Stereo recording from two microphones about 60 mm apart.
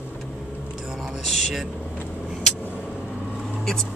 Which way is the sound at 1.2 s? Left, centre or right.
Centre.